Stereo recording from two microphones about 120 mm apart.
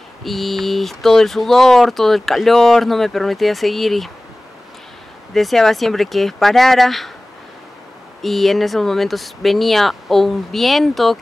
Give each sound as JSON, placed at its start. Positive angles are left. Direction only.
{"t": 0.2, "sound": "speech", "side_deg": 0}
{"t": 5.3, "sound": "speech", "side_deg": 0}
{"t": 8.2, "sound": "speech", "side_deg": 0}